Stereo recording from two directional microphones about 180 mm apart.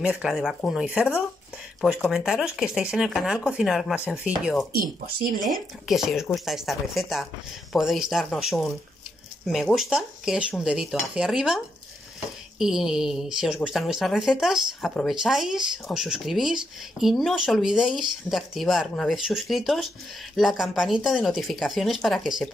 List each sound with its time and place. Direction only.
0.0 s speech: 5° right (ahead or behind)
5.0 s speech: 55° right (ahead or behind)
5.5 s speech: centre (ahead or behind)